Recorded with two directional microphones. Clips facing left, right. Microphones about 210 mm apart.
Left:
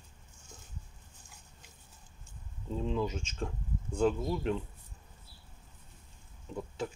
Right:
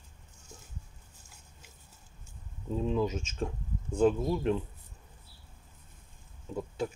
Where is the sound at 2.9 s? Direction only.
15° right (ahead or behind).